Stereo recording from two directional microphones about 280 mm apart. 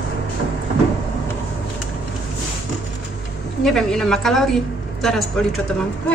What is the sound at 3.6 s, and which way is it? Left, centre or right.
A woman's voice, centre.